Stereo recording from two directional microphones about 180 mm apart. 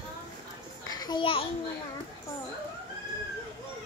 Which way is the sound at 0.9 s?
25° left (ahead or behind).